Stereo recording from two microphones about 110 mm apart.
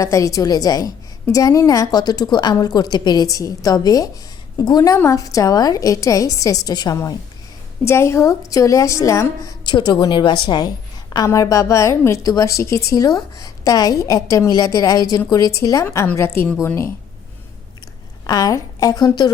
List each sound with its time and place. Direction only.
0.0 s a woman's voice: 30° left (ahead or behind)
18.3 s a woman's voice: 35° left (ahead or behind)